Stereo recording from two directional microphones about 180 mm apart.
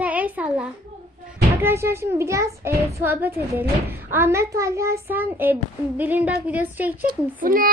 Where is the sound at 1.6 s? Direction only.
15° right (ahead or behind).